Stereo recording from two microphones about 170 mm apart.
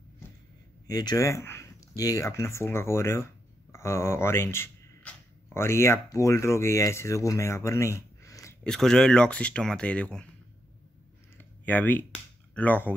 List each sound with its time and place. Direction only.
0.8 s speech: 20° left (ahead or behind)
8.6 s speech: 5° left (ahead or behind)
11.3 s a sound: 10° left (ahead or behind)